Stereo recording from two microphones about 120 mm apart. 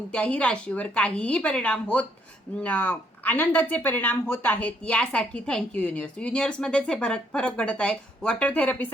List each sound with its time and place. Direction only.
0.1 s speech: 10° left (ahead or behind)